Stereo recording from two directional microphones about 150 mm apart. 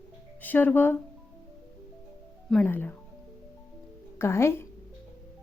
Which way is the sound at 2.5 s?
10° left (ahead or behind).